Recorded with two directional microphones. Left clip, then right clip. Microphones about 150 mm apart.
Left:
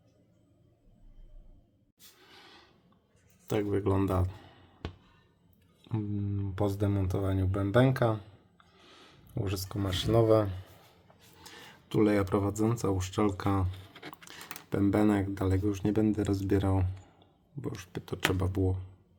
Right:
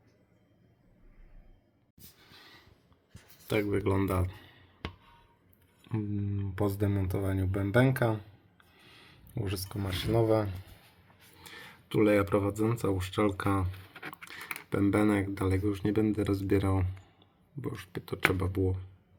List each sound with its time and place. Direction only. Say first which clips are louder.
2.2 s a sound: even; 5° left (ahead or behind)
5.8 s speech: even; 10° left (ahead or behind); by 10.6 s 25° left (ahead or behind)
11.3 s speech: right 2 dB; 10° left (ahead or behind)
18.3 s speech: even; 15° left (ahead or behind)